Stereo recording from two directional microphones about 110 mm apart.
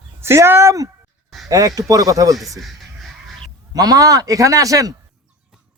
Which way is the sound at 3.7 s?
35° right (ahead or behind).